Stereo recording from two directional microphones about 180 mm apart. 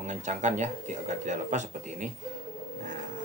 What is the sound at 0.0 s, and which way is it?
Speech, 40° right (ahead or behind).